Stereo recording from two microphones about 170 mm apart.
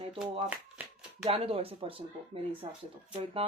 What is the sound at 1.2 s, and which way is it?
Speech, 35° right (ahead or behind).